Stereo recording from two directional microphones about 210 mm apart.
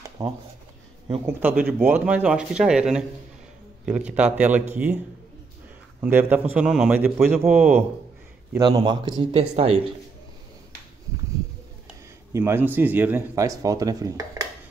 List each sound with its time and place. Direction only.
0.2 s speech: 15° right (ahead or behind)
8.5 s speech: 20° right (ahead or behind)
12.3 s speech: 15° right (ahead or behind)